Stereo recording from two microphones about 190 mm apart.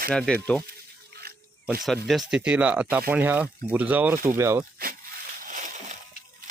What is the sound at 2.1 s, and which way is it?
Speech, centre (ahead or behind).